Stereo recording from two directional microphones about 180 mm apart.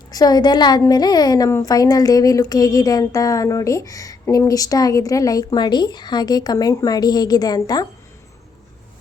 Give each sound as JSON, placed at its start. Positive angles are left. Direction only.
{"t": 0.1, "sound": "a woman's voice", "side_deg": 20}